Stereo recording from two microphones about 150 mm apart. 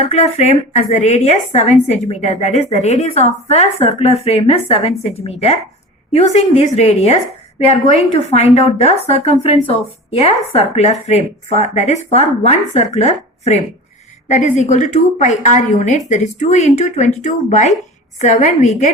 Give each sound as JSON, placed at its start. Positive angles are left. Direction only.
{"t": 0.0, "sound": "a woman's voice", "side_deg": 45}